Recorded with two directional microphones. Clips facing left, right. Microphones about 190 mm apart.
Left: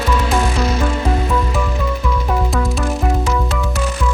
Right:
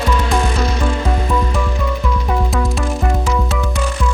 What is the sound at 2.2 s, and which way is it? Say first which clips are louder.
Music: even; centre (ahead or behind).